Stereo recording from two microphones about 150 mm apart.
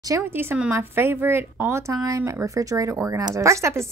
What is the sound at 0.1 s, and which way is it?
Speech, 15° right (ahead or behind).